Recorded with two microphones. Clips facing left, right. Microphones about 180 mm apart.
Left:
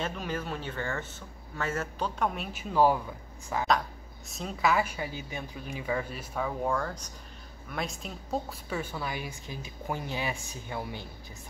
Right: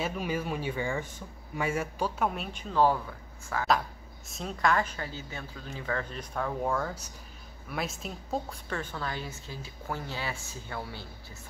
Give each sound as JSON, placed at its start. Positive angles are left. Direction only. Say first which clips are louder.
{"t": 0.0, "sound": "speech", "louder": "right 2 dB", "side_deg": -10}
{"t": 4.3, "sound": "a woman's voice", "louder": "even", "side_deg": 0}